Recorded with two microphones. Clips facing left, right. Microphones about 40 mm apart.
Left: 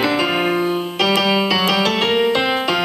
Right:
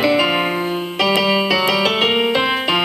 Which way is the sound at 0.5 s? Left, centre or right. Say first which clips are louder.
Left 2 dB; centre.